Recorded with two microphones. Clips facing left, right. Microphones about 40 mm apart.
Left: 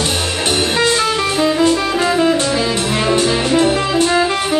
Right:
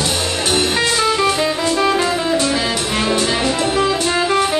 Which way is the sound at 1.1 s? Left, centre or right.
Centre.